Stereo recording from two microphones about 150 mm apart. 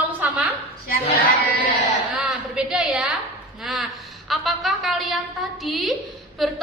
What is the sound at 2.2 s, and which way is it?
Speech, 5° right (ahead or behind).